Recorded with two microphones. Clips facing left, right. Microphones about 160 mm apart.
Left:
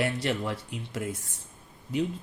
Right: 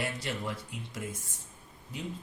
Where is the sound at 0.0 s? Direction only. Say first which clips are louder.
Left 7 dB; 70° left (ahead or behind).